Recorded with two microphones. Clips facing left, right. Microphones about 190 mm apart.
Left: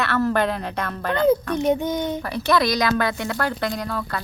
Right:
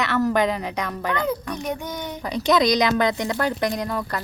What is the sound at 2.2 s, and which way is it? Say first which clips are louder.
A woman's voice: right 5 dB; 15° right (ahead or behind).